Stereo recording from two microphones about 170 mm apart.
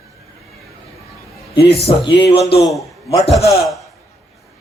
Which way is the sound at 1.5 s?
35° left (ahead or behind).